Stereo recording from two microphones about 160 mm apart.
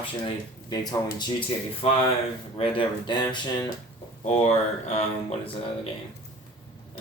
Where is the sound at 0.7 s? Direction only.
25° left (ahead or behind).